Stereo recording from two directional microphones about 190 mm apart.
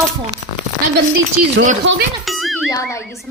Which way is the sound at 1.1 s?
45° right (ahead or behind).